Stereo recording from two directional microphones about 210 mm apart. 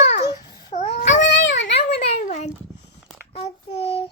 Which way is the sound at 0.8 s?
35° left (ahead or behind).